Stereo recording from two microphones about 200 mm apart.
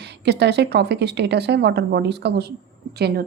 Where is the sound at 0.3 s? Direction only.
55° right (ahead or behind).